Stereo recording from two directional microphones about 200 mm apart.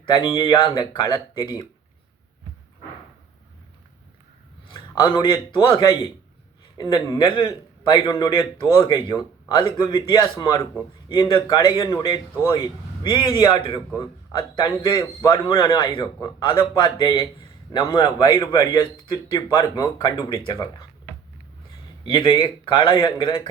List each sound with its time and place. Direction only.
0.3 s a man's voice: 25° left (ahead or behind)
4.7 s a man's voice: 25° left (ahead or behind)
22.0 s a man's voice: 25° left (ahead or behind)